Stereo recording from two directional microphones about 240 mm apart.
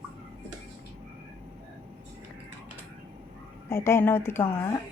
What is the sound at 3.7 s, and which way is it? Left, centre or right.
Speech, centre.